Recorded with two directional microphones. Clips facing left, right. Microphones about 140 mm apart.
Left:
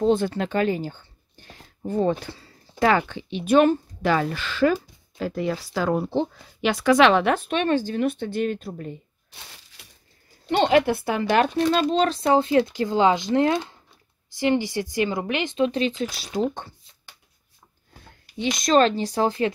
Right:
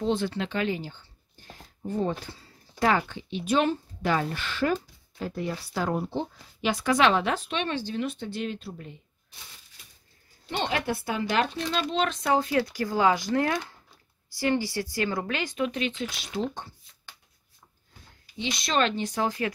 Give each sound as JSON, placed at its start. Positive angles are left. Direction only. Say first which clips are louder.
{"t": 0.0, "sound": "speech", "louder": "left 6 dB", "side_deg": 45}
{"t": 1.9, "sound": "speech", "louder": "left 6 dB", "side_deg": 75}
{"t": 4.0, "sound": "a woman's voice", "louder": "left 3 dB", "side_deg": 90}
{"t": 9.3, "sound": "crushing", "louder": "left 4 dB", "side_deg": 70}
{"t": 10.5, "sound": "speech", "louder": "left 10 dB", "side_deg": 65}
{"t": 18.2, "sound": "speech", "louder": "left 7 dB", "side_deg": 50}